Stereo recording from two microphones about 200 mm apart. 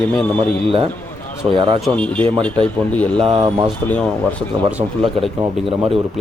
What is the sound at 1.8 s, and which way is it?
Speech, 5° left (ahead or behind).